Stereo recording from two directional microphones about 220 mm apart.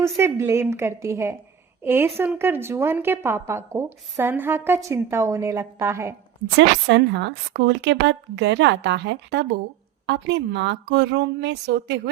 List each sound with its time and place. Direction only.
0.2 s a woman's voice: 10° right (ahead or behind)
6.6 s a woman's voice: 55° right (ahead or behind)